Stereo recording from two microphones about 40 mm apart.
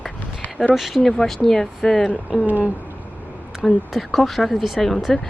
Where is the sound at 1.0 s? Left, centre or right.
Left.